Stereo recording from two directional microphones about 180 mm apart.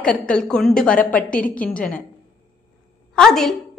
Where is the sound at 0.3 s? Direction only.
5° left (ahead or behind).